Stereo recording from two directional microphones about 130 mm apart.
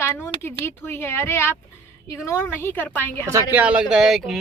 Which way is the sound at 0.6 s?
20° left (ahead or behind).